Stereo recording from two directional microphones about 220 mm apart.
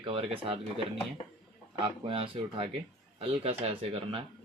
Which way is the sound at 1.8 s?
25° right (ahead or behind).